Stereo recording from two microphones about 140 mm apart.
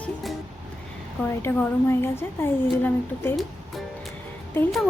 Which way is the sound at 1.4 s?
15° left (ahead or behind).